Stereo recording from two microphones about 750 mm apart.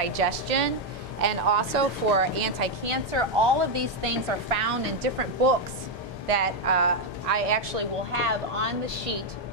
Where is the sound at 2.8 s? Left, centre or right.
Right.